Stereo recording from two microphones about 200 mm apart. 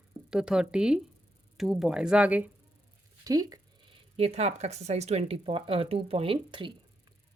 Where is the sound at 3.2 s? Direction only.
20° right (ahead or behind).